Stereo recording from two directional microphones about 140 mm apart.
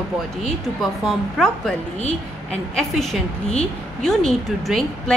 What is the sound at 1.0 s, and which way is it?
A woman's voice, 5° left (ahead or behind).